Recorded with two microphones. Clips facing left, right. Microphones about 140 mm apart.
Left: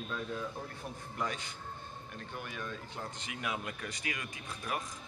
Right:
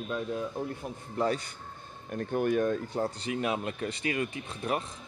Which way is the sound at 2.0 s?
50° right (ahead or behind).